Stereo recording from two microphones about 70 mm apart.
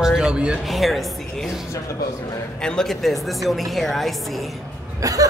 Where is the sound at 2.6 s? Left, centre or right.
Centre.